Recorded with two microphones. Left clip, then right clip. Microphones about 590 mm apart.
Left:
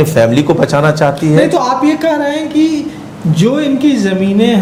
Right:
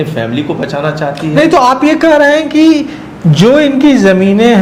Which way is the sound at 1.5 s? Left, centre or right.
Right.